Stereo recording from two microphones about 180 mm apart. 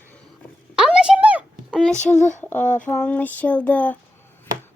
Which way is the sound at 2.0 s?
40° left (ahead or behind).